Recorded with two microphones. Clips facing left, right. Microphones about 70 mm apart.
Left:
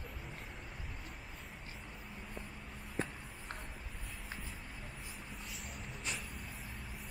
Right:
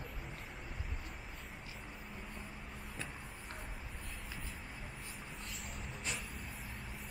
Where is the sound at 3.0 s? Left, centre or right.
Left.